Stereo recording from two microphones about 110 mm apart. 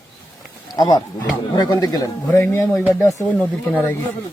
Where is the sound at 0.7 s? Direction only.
40° left (ahead or behind).